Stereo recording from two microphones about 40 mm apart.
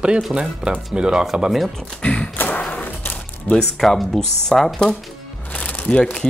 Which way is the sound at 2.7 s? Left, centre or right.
Left.